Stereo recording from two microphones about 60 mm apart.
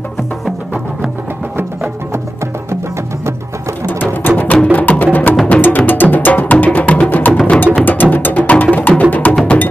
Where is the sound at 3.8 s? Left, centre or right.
Left.